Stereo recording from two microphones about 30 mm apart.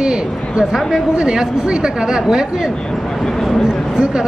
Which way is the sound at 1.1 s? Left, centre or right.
Right.